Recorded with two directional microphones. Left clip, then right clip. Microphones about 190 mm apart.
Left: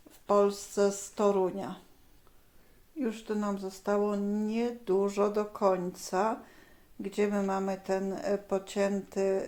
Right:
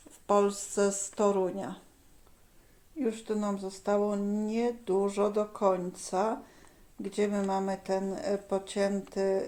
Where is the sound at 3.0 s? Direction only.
Centre (ahead or behind).